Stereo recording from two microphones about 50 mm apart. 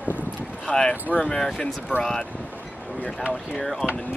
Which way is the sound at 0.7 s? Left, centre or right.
Left.